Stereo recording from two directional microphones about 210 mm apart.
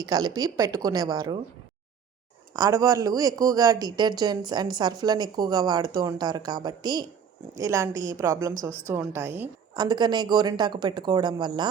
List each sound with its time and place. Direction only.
0.0 s speech: 20° right (ahead or behind)
2.6 s a woman's voice: 15° right (ahead or behind)